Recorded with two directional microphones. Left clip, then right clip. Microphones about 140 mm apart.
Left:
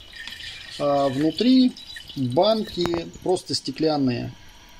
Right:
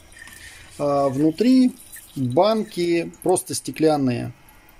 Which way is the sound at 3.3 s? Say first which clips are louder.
Right 1 dB; 45° right (ahead or behind).